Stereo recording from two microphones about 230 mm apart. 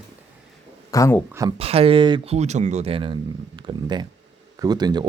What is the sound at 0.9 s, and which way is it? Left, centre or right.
Speech, centre.